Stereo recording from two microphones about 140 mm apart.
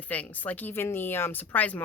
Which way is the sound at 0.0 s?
10° left (ahead or behind).